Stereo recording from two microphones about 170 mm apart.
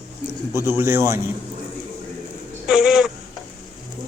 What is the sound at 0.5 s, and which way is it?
Speech, 15° right (ahead or behind).